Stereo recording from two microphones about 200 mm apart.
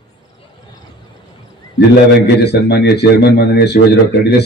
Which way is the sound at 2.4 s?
55° left (ahead or behind).